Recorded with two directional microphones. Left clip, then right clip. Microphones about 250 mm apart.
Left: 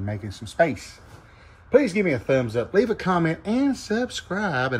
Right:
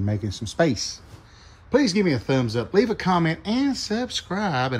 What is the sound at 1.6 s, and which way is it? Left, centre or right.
Speech, centre.